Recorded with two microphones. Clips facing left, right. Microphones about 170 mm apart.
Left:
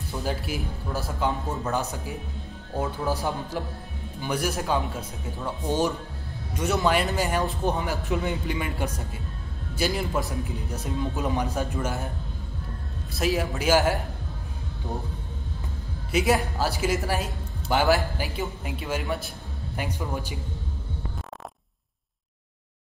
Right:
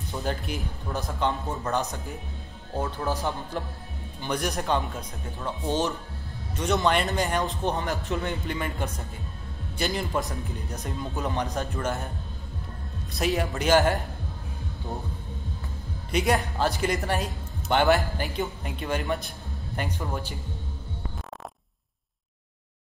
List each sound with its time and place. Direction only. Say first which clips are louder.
0.2 s speech: left 1 dB; centre (ahead or behind)
13.1 s speech: left 1 dB; centre (ahead or behind)
16.1 s speech: left 2 dB; 5° left (ahead or behind)